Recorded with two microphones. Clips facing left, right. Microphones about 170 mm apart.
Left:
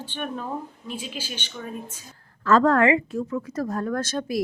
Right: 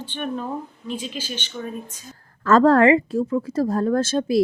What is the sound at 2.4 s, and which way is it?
A woman's voice, 40° right (ahead or behind).